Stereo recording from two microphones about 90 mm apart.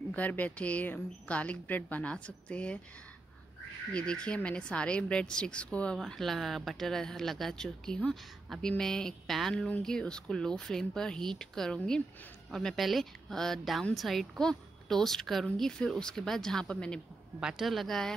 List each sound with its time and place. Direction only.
0.1 s a woman's voice: 20° left (ahead or behind)
3.9 s a woman's voice: 10° left (ahead or behind)
17.4 s speech: 5° right (ahead or behind)